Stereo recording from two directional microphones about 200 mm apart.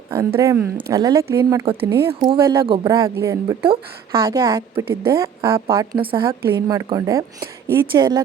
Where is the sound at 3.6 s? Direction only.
25° right (ahead or behind).